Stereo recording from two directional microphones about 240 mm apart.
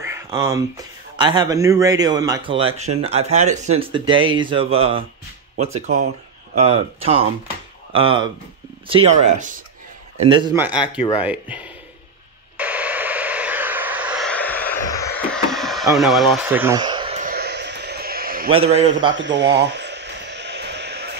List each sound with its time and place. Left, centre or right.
0.0 s speech: centre
3.0 s speech: right
10.2 s speech: centre
10.5 s speech: centre
10.9 s speech: centre
11.2 s speech: centre
12.5 s vehicle: centre
15.3 s a sound: centre; by 17.3 s right
17.3 s a sound: right
18.5 s speech: right
19.1 s a sound: right